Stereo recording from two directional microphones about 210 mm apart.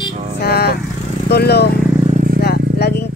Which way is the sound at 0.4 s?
50° left (ahead or behind).